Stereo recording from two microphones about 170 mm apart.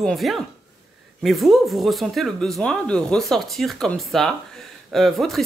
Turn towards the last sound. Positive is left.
turn(degrees=0)  # may be behind; listen again after turning